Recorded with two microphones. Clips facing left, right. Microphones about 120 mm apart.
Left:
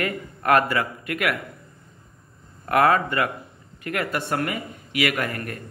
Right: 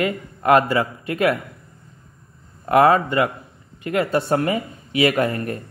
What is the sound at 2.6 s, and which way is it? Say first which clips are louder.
Speech: right 4 dB; 25° right (ahead or behind).